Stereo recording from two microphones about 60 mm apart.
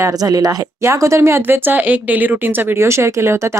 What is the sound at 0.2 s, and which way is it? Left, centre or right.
Speech, right.